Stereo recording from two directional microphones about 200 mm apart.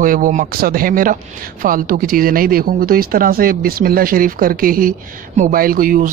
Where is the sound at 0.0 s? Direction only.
40° right (ahead or behind).